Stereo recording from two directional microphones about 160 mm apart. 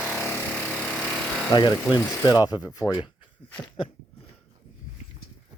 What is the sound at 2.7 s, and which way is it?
Speech, 25° left (ahead or behind).